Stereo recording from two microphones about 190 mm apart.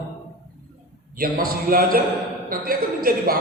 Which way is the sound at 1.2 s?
50° right (ahead or behind).